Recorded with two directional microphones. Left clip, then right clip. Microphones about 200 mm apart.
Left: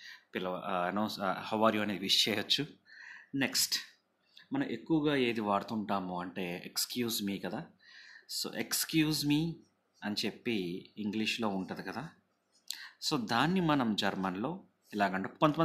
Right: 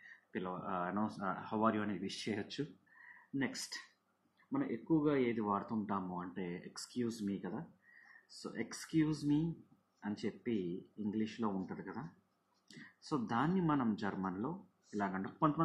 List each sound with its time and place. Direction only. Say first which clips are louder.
0.3 s speech: left 6 dB; 55° left (ahead or behind)
4.5 s speech: left 3 dB; 90° left; by 11.5 s 60° left (ahead or behind)
11.6 s speech: left 6 dB; 75° left (ahead or behind)
13.1 s speech: left 5 dB; 60° left (ahead or behind)